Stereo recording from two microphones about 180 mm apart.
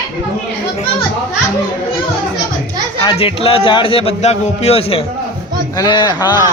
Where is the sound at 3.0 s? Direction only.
25° left (ahead or behind).